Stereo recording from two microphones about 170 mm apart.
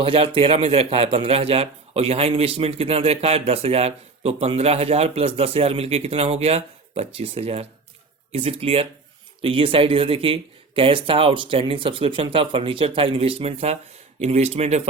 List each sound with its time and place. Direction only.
0.0 s a man's voice: 30° right (ahead or behind)